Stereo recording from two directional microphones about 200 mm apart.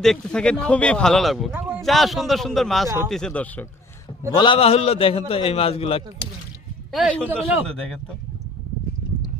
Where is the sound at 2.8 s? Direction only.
15° right (ahead or behind).